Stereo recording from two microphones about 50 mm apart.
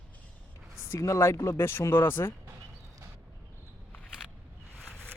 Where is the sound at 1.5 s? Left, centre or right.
Left.